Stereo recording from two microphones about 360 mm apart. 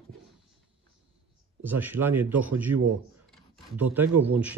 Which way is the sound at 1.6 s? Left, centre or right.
Centre.